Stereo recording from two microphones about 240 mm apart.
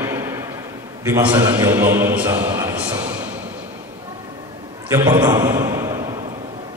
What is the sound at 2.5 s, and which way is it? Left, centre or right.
Train, centre.